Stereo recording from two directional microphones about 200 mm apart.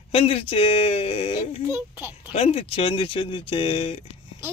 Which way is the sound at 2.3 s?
30° left (ahead or behind).